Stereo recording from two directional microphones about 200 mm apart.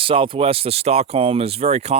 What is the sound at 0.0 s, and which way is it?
Speech, 25° right (ahead or behind).